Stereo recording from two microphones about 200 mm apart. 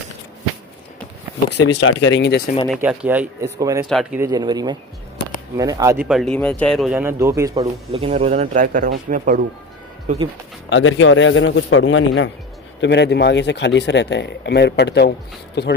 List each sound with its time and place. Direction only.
1.6 s speech: 65° left (ahead or behind)
2.6 s speech: 5° right (ahead or behind)
3.8 s speech: centre (ahead or behind)
4.2 s speech: 20° right (ahead or behind)
6.1 s speech: centre (ahead or behind); by 7.7 s 15° right (ahead or behind)
7.9 s speech: 30° right (ahead or behind)
10.7 s a man's voice: 75° left (ahead or behind)
12.8 s speech: 60° left (ahead or behind)